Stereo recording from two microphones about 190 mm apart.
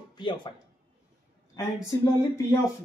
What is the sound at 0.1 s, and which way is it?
Speech, 25° left (ahead or behind).